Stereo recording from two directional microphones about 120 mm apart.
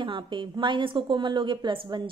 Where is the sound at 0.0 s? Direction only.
45° right (ahead or behind).